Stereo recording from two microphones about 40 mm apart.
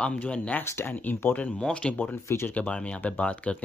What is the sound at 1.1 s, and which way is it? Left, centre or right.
Speech, left.